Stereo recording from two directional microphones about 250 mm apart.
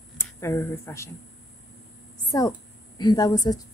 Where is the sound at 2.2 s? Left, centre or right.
Centre.